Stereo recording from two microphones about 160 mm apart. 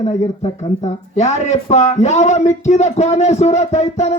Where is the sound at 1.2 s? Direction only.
45° left (ahead or behind).